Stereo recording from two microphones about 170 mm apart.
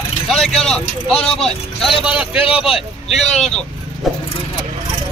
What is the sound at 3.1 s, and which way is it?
Speech, 40° left (ahead or behind).